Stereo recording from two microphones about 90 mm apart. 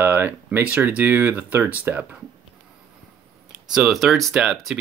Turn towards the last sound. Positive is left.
turn(degrees=-5)  # may be behind; listen again after turning